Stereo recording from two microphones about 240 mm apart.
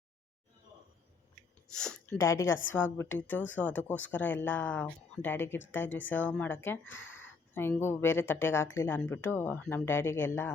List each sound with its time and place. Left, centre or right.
1.7 s speech: centre
6.8 s speech: left
7.1 s speech: centre